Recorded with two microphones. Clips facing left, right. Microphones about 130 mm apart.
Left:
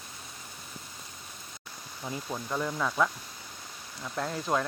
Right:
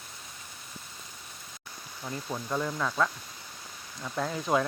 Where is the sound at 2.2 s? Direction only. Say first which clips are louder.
Right 1 dB; centre (ahead or behind).